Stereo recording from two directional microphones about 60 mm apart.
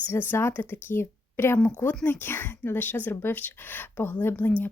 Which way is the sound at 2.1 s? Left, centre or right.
Left.